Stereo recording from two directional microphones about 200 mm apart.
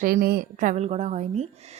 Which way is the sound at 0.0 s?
45° right (ahead or behind).